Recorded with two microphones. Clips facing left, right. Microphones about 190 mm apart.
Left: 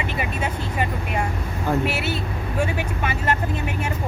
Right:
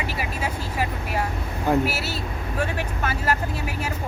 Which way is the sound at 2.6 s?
10° left (ahead or behind).